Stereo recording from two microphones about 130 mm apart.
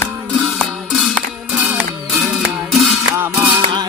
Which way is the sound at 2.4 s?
Centre (ahead or behind).